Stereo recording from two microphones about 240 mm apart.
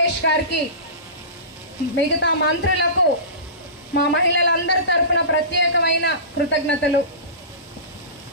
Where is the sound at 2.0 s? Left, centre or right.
Left.